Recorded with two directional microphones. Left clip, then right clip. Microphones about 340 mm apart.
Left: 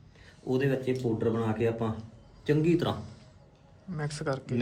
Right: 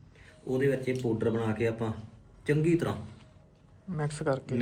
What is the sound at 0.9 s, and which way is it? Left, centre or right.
A man's voice, centre.